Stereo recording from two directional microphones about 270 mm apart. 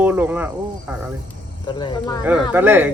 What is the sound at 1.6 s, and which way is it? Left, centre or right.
Speech, centre.